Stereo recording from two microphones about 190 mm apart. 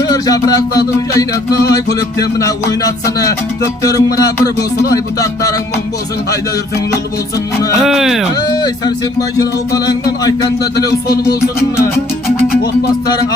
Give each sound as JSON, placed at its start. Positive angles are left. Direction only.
{"t": 0.1, "sound": "speech", "side_deg": 20}
{"t": 3.8, "sound": "music", "side_deg": 20}
{"t": 7.8, "sound": "speech", "side_deg": 0}
{"t": 8.4, "sound": "music", "side_deg": 20}